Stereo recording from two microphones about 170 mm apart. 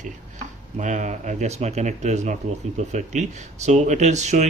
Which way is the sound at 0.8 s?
45° right (ahead or behind).